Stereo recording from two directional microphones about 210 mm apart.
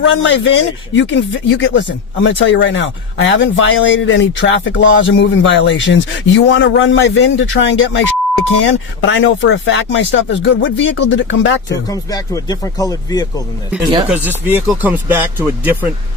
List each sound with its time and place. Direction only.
0.0 s speech: 60° left (ahead or behind)
11.7 s speech: 15° left (ahead or behind)
14.1 s speech: 10° right (ahead or behind)